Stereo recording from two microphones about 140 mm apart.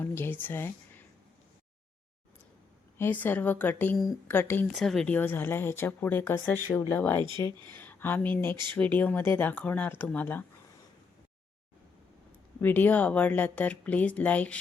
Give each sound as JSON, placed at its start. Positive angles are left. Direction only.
{"t": 0.0, "sound": "speech", "side_deg": 15}
{"t": 3.0, "sound": "speech", "side_deg": 15}
{"t": 4.7, "sound": "speech", "side_deg": 0}
{"t": 7.2, "sound": "speech", "side_deg": -30}
{"t": 7.7, "sound": "speech", "side_deg": 15}
{"t": 12.6, "sound": "speech", "side_deg": 10}